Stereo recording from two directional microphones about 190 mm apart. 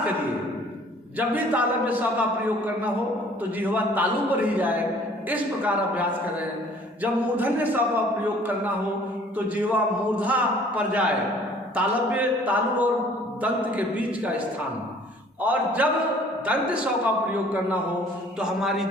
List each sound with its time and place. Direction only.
1.2 s a man's voice: 10° right (ahead or behind)
3.6 s a man's voice: 10° right (ahead or behind)
18.3 s a sound: 5° right (ahead or behind)